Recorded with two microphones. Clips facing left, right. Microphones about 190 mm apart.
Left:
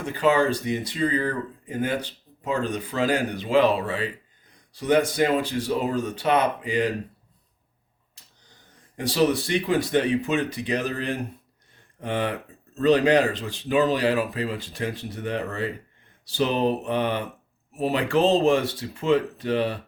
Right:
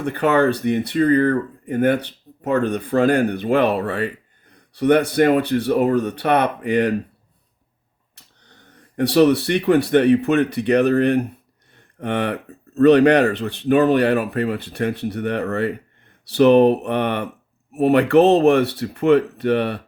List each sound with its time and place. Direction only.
0.0 s speech: 60° right (ahead or behind)
8.1 s speech: 65° right (ahead or behind)